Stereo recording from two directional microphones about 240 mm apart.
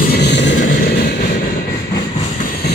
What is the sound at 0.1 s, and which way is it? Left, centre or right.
Vehicle, left.